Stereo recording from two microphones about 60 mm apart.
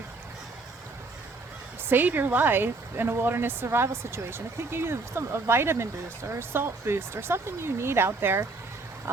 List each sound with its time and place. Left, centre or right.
1.9 s a woman's voice: right